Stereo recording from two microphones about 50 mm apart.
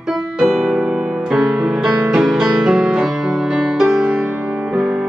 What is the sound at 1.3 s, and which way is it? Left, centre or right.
Music, centre.